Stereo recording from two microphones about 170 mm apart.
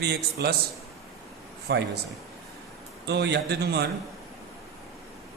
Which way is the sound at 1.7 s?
90° right.